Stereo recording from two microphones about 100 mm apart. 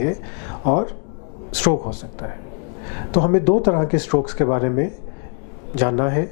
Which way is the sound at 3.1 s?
15° left (ahead or behind).